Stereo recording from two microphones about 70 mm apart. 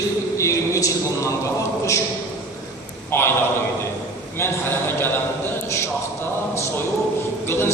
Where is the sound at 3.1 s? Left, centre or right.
Left.